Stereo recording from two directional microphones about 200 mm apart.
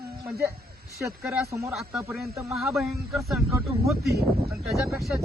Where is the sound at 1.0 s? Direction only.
15° right (ahead or behind).